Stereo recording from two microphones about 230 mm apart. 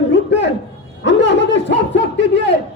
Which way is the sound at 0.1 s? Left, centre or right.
Left.